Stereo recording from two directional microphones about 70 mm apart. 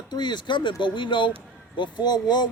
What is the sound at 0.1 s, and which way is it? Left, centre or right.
Speech, left.